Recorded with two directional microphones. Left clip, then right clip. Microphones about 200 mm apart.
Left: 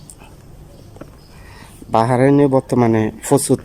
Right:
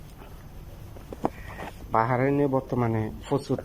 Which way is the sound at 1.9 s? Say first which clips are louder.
Left 10 dB; 25° left (ahead or behind).